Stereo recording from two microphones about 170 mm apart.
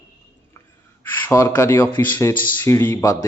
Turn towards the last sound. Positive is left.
turn(degrees=20)  # may be behind; listen again after turning